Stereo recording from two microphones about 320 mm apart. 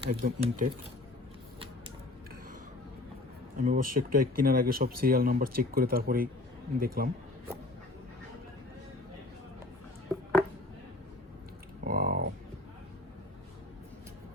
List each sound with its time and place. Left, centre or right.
0.0 s speech: right
3.6 s speech: right
11.9 s a sound: right